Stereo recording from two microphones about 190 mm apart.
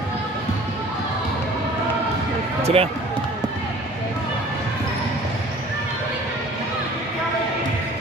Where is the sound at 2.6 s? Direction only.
30° right (ahead or behind).